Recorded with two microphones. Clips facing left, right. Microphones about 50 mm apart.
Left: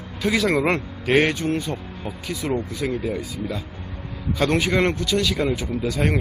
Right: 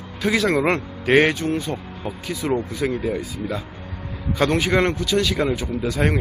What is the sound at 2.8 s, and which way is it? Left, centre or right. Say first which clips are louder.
Speech: right 2 dB; right.